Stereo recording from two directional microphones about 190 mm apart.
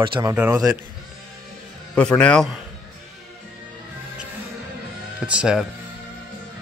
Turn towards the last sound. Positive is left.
turn(degrees=-5)  # may be behind; listen again after turning